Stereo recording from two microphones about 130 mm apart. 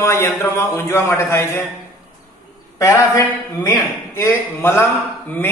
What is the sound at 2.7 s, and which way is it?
A man's voice, 25° left (ahead or behind).